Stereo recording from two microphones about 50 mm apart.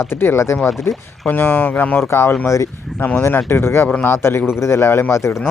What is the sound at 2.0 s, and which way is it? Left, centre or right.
Speech, left.